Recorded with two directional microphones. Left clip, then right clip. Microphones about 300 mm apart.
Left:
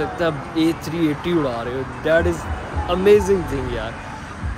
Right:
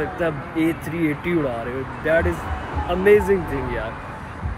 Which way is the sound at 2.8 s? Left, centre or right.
Centre.